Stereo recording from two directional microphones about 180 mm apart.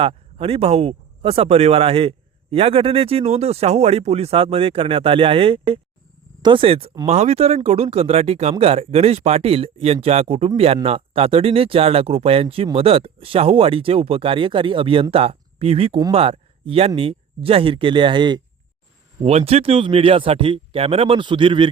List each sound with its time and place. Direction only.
0.0 s speech: 30° right (ahead or behind)